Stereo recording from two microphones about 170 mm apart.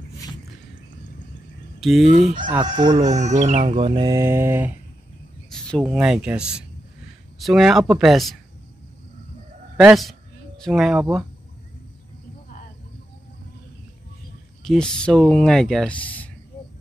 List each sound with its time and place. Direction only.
1.8 s speech: centre (ahead or behind)
2.4 s speech: 25° right (ahead or behind)
3.0 s speech: 45° right (ahead or behind); by 4.7 s 15° right (ahead or behind)
5.5 s a sound: 5° left (ahead or behind)
5.9 s speech: 5° right (ahead or behind)
9.8 s speech: 5° right (ahead or behind)
14.6 s speech: 5° left (ahead or behind)